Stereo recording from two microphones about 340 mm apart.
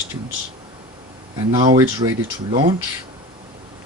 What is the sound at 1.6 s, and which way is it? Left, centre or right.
Speech, centre.